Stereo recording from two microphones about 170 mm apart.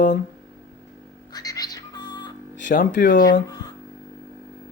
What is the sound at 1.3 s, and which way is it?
Bird, 20° left (ahead or behind).